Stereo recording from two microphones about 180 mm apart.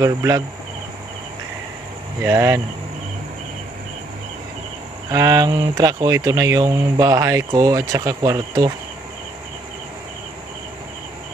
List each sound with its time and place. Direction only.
0.0 s speech: 20° right (ahead or behind)
2.2 s speech: 15° right (ahead or behind)
5.1 s speech: 20° right (ahead or behind)